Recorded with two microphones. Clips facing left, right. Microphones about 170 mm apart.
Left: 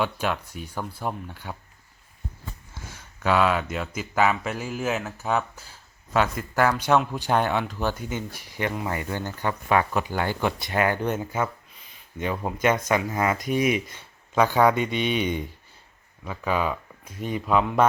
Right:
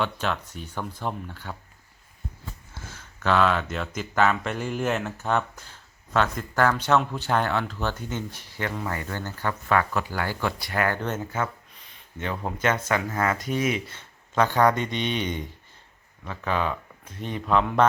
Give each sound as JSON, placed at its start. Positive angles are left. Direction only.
{"t": 0.0, "sound": "speech", "side_deg": 10}
{"t": 2.9, "sound": "speech", "side_deg": 10}